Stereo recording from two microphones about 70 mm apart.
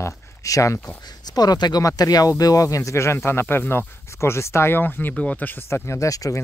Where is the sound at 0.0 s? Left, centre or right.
Left.